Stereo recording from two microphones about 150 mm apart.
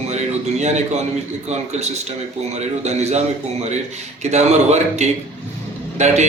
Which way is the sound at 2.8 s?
50° right (ahead or behind).